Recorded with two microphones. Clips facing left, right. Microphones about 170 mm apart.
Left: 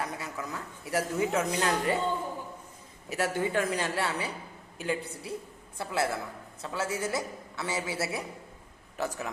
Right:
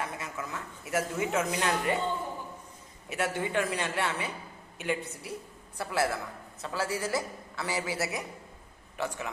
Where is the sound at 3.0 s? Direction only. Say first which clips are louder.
Left 2 dB; 40° left (ahead or behind).